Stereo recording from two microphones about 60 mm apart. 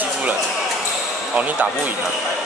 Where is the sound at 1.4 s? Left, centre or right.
Right.